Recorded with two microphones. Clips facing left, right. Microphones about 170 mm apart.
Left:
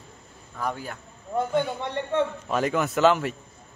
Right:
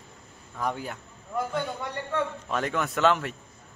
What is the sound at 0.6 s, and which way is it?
Speech, 15° right (ahead or behind).